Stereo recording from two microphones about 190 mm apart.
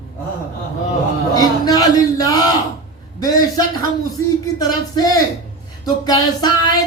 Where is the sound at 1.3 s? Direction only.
20° left (ahead or behind).